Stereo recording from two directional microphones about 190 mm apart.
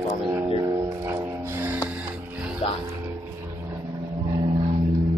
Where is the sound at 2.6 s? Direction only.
35° left (ahead or behind).